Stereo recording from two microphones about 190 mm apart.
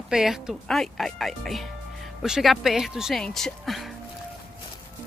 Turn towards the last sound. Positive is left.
turn(degrees=0)  # may be behind; listen again after turning